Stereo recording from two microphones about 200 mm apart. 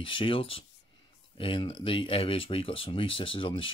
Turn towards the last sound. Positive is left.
turn(degrees=25)  # may be behind; listen again after turning